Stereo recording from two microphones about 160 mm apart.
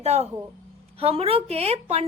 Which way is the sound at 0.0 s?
40° right (ahead or behind).